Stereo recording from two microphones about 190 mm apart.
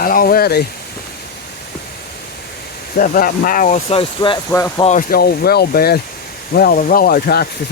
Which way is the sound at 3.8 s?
25° left (ahead or behind).